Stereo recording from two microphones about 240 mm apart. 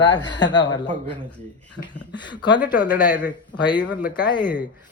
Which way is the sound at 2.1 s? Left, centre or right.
Centre.